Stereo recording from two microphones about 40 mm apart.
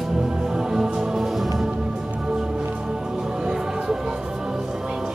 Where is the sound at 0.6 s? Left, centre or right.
Centre.